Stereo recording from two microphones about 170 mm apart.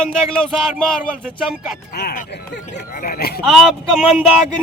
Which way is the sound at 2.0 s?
65° left (ahead or behind).